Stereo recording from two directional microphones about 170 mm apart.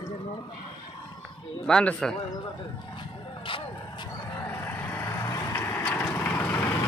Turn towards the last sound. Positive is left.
turn(degrees=10)  # may be behind; listen again after turning